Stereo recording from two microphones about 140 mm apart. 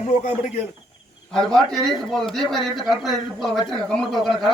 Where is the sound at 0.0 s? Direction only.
60° left (ahead or behind).